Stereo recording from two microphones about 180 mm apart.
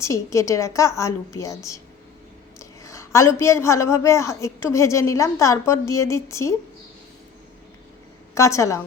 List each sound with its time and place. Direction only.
0.0 s a woman's voice: 15° left (ahead or behind)
8.4 s a woman's voice: 15° left (ahead or behind)